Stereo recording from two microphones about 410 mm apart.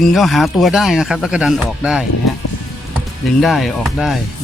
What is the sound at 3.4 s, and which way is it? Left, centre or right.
Speech, centre.